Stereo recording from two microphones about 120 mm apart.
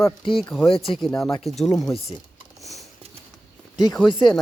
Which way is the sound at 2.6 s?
Centre (ahead or behind).